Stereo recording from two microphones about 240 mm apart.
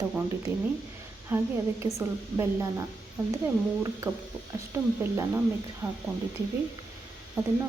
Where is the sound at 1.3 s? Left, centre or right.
Centre.